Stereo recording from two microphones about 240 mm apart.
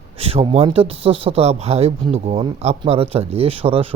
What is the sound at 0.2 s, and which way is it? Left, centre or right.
Speech, right.